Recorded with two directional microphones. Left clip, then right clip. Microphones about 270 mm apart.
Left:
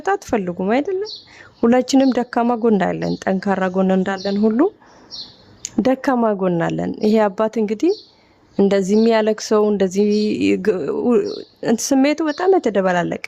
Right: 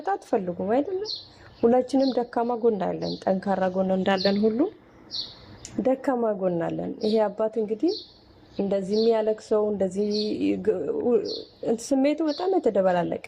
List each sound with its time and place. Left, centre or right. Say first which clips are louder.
0.1 s a woman's voice: left 6 dB; left
4.0 s speech: left 1 dB; centre
4.4 s a woman's voice: left 7 dB; left